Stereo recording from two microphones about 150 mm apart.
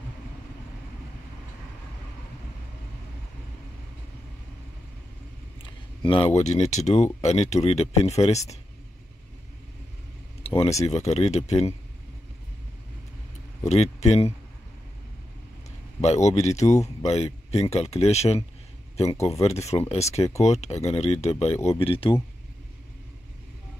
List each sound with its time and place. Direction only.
5.6 s speech: 35° left (ahead or behind)
10.4 s a sound: 40° left (ahead or behind)
10.8 s speech: 45° left (ahead or behind)
13.7 s speech: 45° left (ahead or behind)
16.0 s speech: 45° left (ahead or behind)
19.4 s speech: 45° left (ahead or behind)